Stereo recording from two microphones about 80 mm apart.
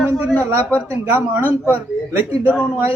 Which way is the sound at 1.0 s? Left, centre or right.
Right.